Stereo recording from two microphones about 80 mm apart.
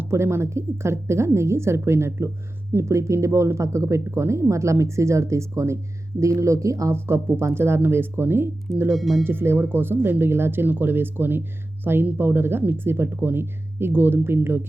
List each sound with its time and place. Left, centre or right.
0.0 s speech: right
8.9 s speech: centre
9.2 s speech: right